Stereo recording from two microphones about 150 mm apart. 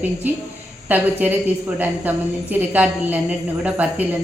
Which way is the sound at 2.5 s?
10° right (ahead or behind).